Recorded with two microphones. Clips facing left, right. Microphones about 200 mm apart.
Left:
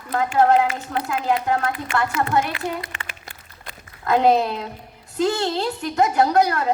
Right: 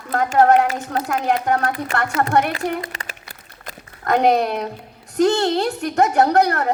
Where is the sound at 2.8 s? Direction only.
40° right (ahead or behind).